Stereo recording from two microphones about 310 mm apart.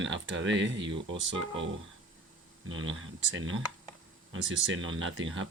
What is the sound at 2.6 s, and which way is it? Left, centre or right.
Speech, right.